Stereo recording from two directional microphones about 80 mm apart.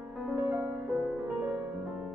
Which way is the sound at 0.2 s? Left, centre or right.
Centre.